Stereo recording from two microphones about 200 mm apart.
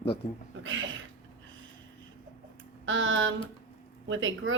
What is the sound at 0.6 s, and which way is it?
Speech, 75° right (ahead or behind).